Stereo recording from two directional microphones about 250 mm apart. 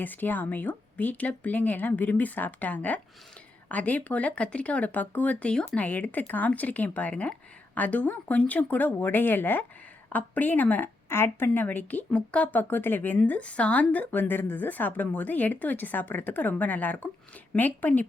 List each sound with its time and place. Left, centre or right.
0.0 s speech: centre